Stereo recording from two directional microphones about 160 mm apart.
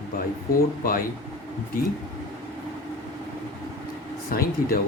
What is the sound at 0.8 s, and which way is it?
Speech, 65° left (ahead or behind).